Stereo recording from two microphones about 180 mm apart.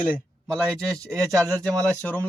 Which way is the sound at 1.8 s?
10° left (ahead or behind).